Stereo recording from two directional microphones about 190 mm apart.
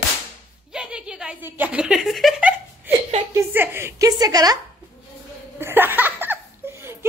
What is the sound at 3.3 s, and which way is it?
A woman's voice, 10° right (ahead or behind).